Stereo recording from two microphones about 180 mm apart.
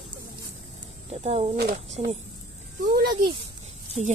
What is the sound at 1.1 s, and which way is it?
Speech, 35° right (ahead or behind).